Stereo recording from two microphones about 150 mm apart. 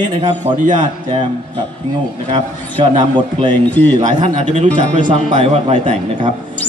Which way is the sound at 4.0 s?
50° right (ahead or behind).